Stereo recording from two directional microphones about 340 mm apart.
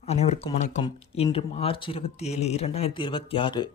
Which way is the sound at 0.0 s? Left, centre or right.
Centre.